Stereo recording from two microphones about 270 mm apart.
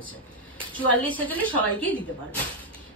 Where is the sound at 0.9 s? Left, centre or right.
Centre.